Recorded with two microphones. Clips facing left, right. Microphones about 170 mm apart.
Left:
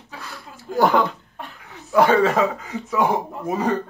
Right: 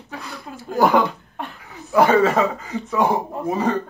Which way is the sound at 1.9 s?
5° right (ahead or behind).